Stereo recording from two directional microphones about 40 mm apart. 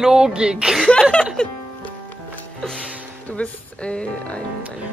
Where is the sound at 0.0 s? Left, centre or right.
Centre.